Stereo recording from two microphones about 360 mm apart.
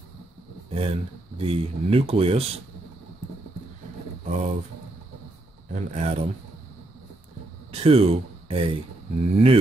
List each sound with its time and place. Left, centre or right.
0.7 s a sound: centre
1.4 s speech: centre
4.3 s speech: centre
5.7 s speech: centre
7.7 s speech: centre